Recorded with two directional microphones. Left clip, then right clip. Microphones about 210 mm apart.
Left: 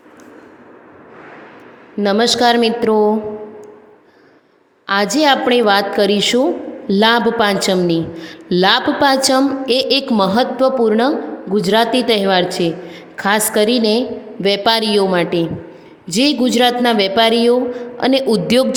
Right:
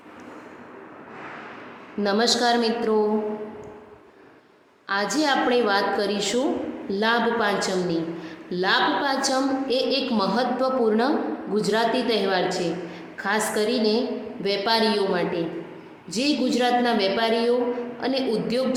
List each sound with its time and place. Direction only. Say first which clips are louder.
2.0 s a woman's voice: left 8 dB; 35° left (ahead or behind)
4.9 s a woman's voice: left 9 dB; 40° left (ahead or behind)